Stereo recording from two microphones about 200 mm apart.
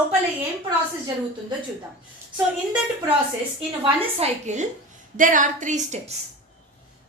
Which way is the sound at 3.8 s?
35° right (ahead or behind).